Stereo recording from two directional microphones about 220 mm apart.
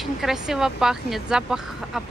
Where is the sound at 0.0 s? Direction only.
Centre (ahead or behind).